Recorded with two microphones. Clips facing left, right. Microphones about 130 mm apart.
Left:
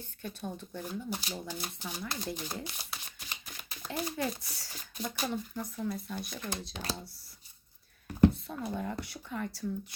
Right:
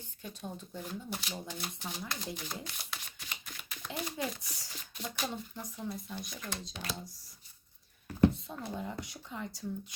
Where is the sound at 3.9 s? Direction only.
15° right (ahead or behind).